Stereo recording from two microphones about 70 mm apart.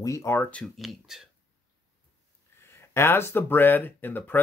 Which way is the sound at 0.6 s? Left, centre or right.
Centre.